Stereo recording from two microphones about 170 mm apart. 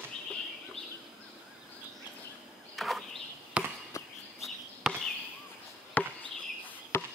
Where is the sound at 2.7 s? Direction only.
Centre (ahead or behind).